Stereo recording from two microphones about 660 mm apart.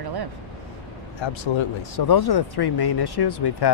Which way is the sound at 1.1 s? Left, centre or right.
Left.